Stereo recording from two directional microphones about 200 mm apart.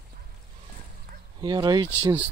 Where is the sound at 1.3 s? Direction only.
20° right (ahead or behind).